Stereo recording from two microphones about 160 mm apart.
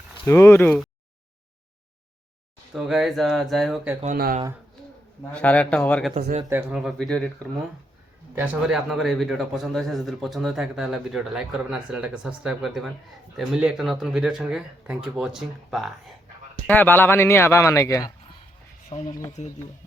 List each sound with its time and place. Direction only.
0.3 s speech: 15° left (ahead or behind)
2.7 s speech: centre (ahead or behind)
4.0 s speech: 60° right (ahead or behind)
5.3 s speech: 10° left (ahead or behind)
6.5 s speech: 10° right (ahead or behind)
8.4 s speech: 5° right (ahead or behind)
16.6 s speech: 10° left (ahead or behind)
19.4 s speech: 40° left (ahead or behind)